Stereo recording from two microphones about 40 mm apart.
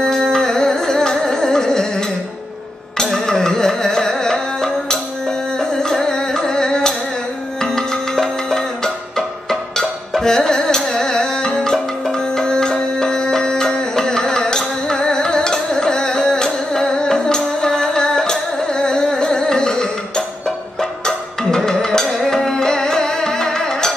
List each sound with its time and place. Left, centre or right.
0.0 s music: centre